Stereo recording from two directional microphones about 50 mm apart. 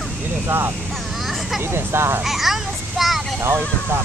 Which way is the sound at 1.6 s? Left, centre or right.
Right.